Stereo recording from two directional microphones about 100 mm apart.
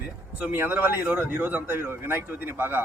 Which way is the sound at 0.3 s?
20° right (ahead or behind).